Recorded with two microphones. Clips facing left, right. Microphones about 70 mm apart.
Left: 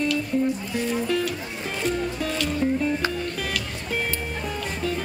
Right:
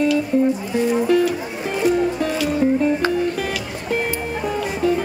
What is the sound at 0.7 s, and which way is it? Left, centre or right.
Speech, centre.